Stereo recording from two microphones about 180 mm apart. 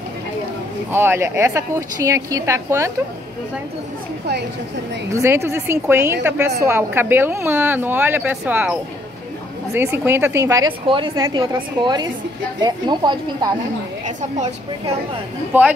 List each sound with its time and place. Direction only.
0.9 s a woman's voice: 15° right (ahead or behind)
5.1 s a woman's voice: 15° right (ahead or behind)
14.0 s a woman's voice: 40° right (ahead or behind)